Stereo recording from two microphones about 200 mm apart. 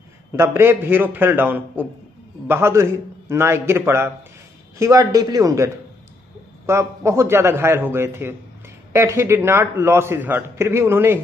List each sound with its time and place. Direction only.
0.4 s a man's voice: 10° right (ahead or behind)